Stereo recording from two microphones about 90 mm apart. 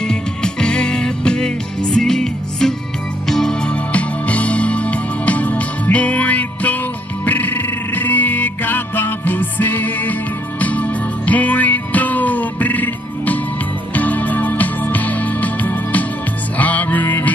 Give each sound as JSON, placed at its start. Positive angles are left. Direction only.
{"t": 0.0, "sound": "music", "side_deg": 10}